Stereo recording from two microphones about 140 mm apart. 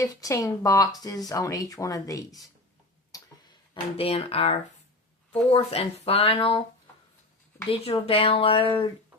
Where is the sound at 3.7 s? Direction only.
40° left (ahead or behind).